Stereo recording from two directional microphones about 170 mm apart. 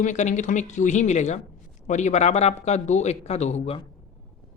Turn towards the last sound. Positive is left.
turn(degrees=40)  # may be behind; listen again after turning